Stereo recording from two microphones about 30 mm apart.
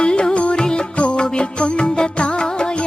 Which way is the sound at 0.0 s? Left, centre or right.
Left.